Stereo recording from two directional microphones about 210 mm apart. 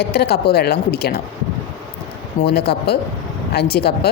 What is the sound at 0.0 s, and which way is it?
A woman's voice, 50° left (ahead or behind).